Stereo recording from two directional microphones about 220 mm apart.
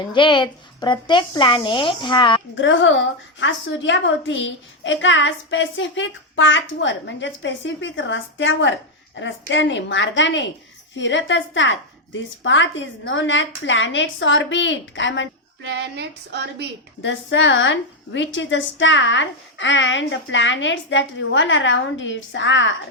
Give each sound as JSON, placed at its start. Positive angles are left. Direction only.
{"t": 0.1, "sound": "speech", "side_deg": 20}
{"t": 2.6, "sound": "a woman's voice", "side_deg": 60}
{"t": 15.6, "sound": "a sound", "side_deg": -50}
{"t": 17.0, "sound": "a woman's voice", "side_deg": 55}